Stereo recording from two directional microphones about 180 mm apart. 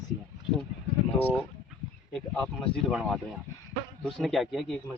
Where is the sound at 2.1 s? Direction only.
5° left (ahead or behind).